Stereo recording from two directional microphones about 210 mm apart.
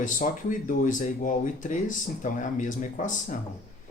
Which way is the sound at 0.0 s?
40° left (ahead or behind).